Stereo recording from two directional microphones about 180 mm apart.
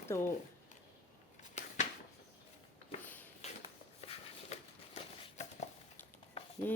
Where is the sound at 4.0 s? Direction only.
35° left (ahead or behind).